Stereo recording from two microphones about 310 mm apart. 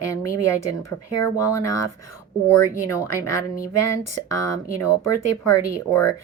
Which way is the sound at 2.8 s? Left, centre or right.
Centre.